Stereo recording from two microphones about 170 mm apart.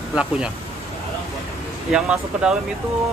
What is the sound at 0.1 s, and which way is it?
Speech, 5° right (ahead or behind).